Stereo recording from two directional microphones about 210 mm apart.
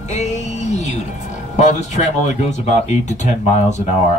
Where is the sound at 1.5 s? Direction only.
35° left (ahead or behind).